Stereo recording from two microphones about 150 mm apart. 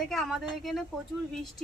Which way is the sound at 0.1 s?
Centre (ahead or behind).